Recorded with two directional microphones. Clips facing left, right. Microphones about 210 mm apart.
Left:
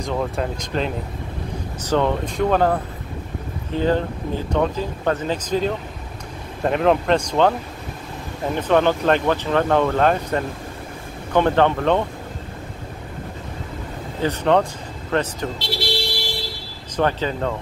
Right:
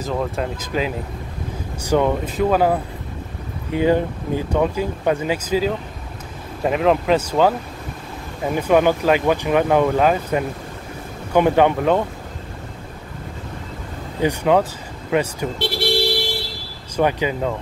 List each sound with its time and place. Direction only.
0.0 s speech: centre (ahead or behind)
8.5 s speech: 10° right (ahead or behind)
14.2 s speech: 10° right (ahead or behind)
15.6 s speech: 55° right (ahead or behind)
16.9 s speech: 10° right (ahead or behind)